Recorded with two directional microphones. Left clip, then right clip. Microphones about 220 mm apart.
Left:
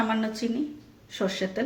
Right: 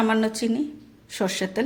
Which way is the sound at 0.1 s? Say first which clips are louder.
Right 5 dB; 45° right (ahead or behind).